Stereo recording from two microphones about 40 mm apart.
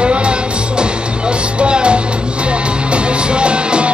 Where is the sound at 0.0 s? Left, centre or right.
Right.